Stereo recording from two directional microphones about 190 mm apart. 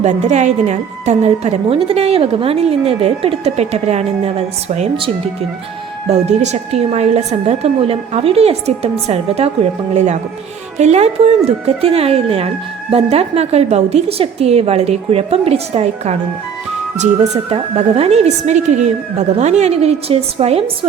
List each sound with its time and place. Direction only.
0.0 s a woman's voice: 40° right (ahead or behind)